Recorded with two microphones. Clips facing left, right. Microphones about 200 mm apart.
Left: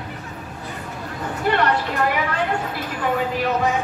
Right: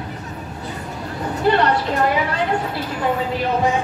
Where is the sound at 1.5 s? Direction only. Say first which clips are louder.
Right 4 dB; 30° right (ahead or behind).